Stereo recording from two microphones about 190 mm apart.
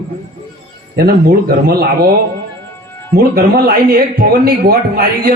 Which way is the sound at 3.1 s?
55° right (ahead or behind).